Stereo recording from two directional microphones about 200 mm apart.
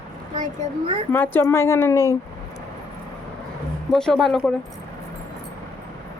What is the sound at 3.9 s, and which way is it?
Speech, centre (ahead or behind).